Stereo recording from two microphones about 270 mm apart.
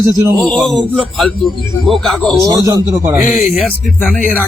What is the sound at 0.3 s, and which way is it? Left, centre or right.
Speech, centre.